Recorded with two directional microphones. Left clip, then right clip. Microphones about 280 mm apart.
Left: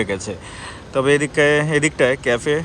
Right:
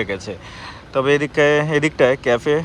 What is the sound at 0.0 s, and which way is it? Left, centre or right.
Speech, centre.